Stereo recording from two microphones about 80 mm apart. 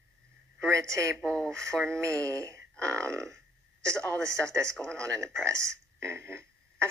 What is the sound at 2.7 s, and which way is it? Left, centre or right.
Speech, centre.